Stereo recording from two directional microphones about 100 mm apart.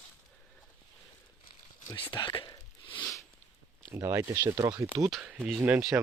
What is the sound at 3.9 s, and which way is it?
Speech, 30° right (ahead or behind).